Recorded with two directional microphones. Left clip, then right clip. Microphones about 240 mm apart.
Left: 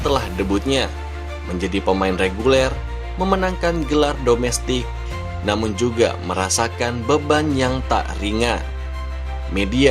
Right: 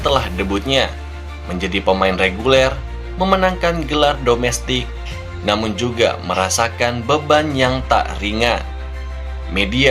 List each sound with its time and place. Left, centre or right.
0.0 s speech: left
9.6 s speech: left